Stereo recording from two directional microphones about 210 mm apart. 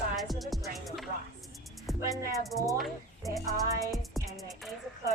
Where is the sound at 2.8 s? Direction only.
Centre (ahead or behind).